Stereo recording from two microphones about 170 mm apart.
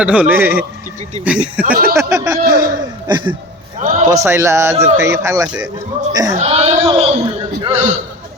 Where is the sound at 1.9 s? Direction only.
15° right (ahead or behind).